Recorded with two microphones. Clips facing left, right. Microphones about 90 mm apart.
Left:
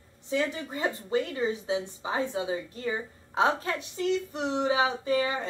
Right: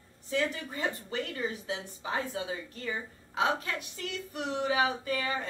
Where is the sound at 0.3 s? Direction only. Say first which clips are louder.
Left 2 dB; 20° left (ahead or behind).